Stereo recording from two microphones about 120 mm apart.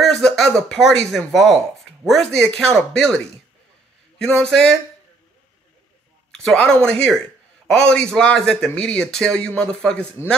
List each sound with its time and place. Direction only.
0.0 s speech: 5° left (ahead or behind)
4.2 s speech: 5° left (ahead or behind)
6.3 s speech: 10° left (ahead or behind)